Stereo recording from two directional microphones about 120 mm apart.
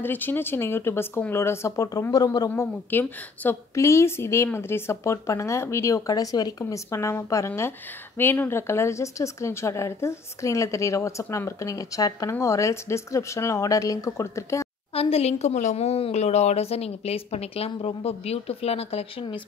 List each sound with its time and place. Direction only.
0.0 s speech: 15° left (ahead or behind)
15.0 s a woman's voice: 55° left (ahead or behind)